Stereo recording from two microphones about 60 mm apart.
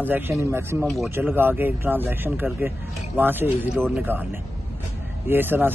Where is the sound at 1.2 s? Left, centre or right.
Right.